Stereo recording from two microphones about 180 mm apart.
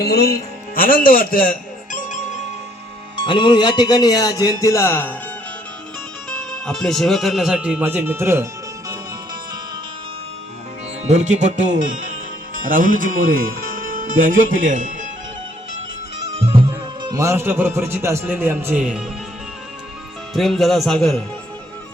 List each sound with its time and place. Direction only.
0.0 s speech: 60° left (ahead or behind)
3.2 s speech: 25° left (ahead or behind)
6.3 s speech: 5° left (ahead or behind); by 8.4 s 15° right (ahead or behind)
11.0 s speech: 40° right (ahead or behind)
16.3 s speech: 30° right (ahead or behind); by 19.0 s 5° right (ahead or behind)
20.3 s speech: centre (ahead or behind)